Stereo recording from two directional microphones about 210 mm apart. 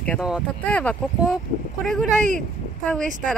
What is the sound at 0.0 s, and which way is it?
Speech, centre (ahead or behind).